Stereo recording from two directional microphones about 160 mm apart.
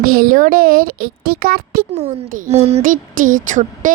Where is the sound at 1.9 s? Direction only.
45° right (ahead or behind).